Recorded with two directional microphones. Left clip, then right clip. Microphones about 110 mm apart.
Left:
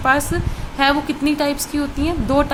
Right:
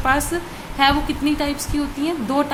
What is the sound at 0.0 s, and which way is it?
A woman's voice, 25° left (ahead or behind).